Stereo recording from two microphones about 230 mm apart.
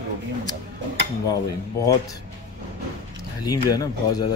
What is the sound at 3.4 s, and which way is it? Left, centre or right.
Speech, centre.